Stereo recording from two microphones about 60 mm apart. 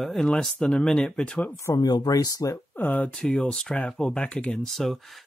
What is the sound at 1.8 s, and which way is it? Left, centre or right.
Speech, left.